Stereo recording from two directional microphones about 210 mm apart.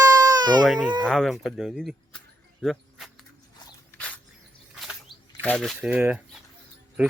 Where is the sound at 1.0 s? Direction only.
Centre (ahead or behind).